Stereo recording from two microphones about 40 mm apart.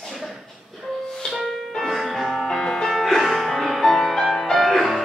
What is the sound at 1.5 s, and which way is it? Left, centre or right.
Music, centre.